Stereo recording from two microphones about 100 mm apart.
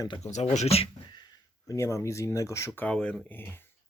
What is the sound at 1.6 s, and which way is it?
Speech, 30° left (ahead or behind).